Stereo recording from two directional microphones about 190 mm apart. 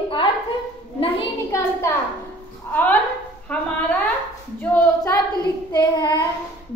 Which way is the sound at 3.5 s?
5° left (ahead or behind).